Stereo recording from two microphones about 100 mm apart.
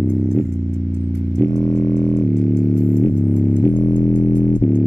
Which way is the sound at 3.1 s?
15° left (ahead or behind).